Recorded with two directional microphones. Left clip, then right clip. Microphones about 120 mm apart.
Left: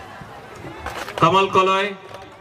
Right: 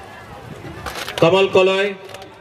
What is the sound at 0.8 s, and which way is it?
Pigeon, 30° right (ahead or behind).